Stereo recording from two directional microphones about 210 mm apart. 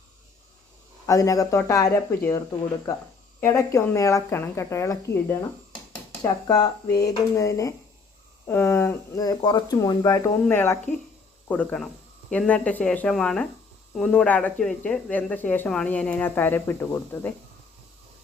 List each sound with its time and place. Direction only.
1.0 s speech: 15° left (ahead or behind)
3.4 s speech: 15° left (ahead or behind)